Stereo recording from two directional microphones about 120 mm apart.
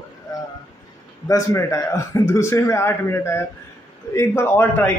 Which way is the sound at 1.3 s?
25° left (ahead or behind).